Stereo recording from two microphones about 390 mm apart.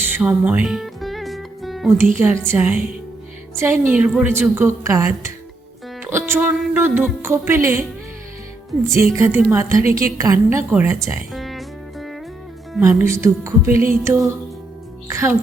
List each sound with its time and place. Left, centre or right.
0.0 s music: centre
2.1 s a woman's voice: centre
8.9 s a woman's voice: centre
10.7 s music: centre
12.7 s a woman's voice: centre